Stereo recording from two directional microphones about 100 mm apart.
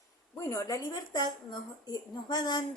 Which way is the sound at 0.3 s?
35° left (ahead or behind).